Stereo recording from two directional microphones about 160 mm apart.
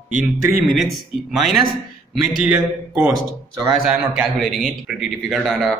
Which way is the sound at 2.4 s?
10° right (ahead or behind).